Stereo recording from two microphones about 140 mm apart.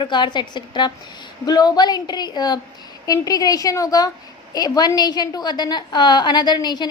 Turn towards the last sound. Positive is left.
turn(degrees=30)  # may be behind; listen again after turning